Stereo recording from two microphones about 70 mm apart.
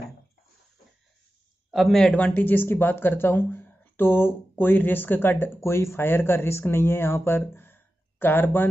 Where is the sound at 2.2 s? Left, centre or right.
Left.